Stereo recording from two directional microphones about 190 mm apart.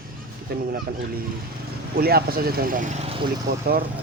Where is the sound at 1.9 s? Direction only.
55° right (ahead or behind); by 3.3 s 30° right (ahead or behind).